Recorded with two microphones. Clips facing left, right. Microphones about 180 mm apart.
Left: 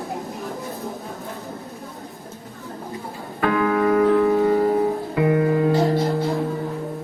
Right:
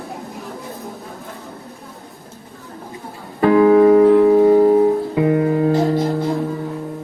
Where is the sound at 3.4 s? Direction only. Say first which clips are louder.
Right 9 dB; 30° right (ahead or behind).